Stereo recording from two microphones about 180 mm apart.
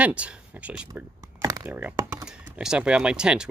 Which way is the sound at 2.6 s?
5° right (ahead or behind).